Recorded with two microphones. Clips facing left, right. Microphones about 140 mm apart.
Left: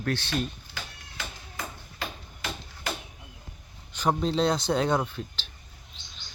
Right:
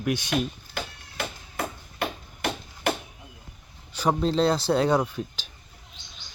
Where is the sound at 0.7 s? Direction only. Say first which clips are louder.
Right 7 dB; 60° right (ahead or behind).